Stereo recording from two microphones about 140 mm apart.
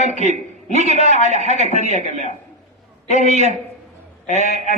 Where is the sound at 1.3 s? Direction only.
55° right (ahead or behind).